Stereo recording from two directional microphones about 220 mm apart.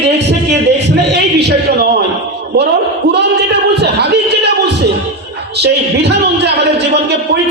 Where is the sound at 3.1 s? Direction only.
50° right (ahead or behind).